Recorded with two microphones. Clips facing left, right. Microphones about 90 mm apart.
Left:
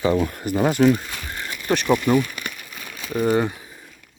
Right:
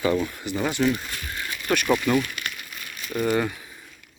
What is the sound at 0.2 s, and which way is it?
Speech, 50° left (ahead or behind).